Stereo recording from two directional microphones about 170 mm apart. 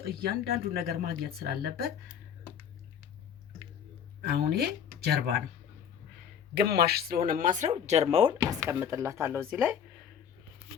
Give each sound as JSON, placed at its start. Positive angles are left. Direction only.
{"t": 0.1, "sound": "speech", "side_deg": -60}
{"t": 4.2, "sound": "speech", "side_deg": -70}
{"t": 6.5, "sound": "speech", "side_deg": -70}
{"t": 8.6, "sound": "speech", "side_deg": -15}